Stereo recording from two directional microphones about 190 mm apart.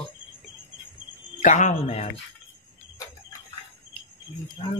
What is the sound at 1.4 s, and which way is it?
Speech, 40° left (ahead or behind).